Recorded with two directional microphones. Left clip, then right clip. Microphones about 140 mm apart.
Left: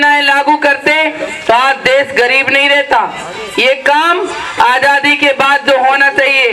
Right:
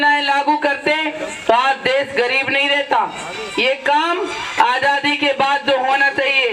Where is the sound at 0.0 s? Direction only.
40° left (ahead or behind).